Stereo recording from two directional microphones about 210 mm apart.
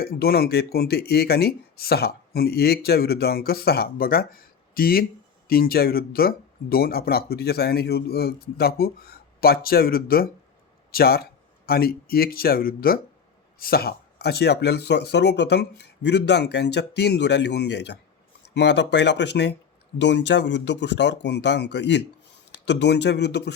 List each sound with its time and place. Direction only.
0.0 s speech: 45° left (ahead or behind)